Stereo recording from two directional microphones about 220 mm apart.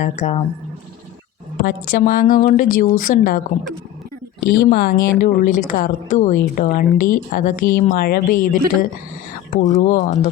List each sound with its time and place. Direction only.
0.0 s a woman's voice: 30° left (ahead or behind)
1.6 s a woman's voice: 40° left (ahead or behind)
4.6 s a woman's voice: 40° left (ahead or behind)